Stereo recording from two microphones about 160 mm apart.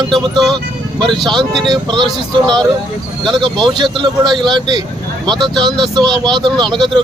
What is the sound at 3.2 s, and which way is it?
Speech, 30° right (ahead or behind).